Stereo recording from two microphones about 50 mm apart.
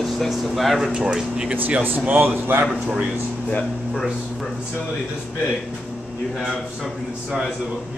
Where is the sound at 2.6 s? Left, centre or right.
Centre.